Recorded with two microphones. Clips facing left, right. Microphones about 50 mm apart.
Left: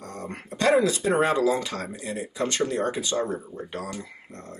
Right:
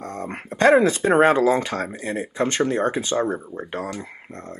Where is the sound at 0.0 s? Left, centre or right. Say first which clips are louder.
Right 5 dB; right.